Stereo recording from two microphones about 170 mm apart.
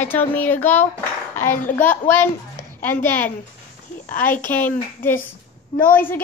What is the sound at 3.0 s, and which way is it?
A child's voice, 10° left (ahead or behind).